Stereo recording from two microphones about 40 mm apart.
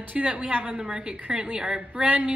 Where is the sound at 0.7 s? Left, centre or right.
Centre.